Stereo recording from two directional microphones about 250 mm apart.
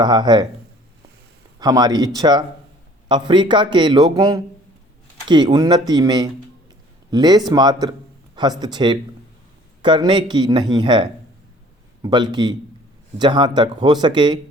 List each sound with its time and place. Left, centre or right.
0.0 s speech: centre
1.5 s speech: centre